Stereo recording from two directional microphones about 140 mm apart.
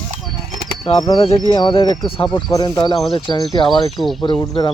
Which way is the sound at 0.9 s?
30° left (ahead or behind).